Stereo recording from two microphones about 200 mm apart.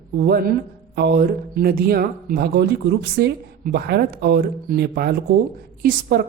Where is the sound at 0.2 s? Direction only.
50° right (ahead or behind).